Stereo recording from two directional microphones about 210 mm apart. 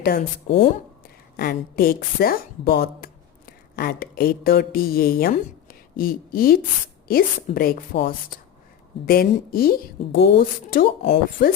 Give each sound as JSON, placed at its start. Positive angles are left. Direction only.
{"t": 0.0, "sound": "speech", "side_deg": 45}
{"t": 0.4, "sound": "speech", "side_deg": 25}
{"t": 1.4, "sound": "a woman's voice", "side_deg": 45}